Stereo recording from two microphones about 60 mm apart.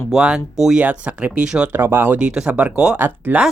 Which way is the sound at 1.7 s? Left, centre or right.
Right.